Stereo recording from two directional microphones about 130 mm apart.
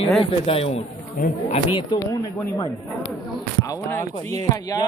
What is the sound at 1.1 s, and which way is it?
Speech, 90° left.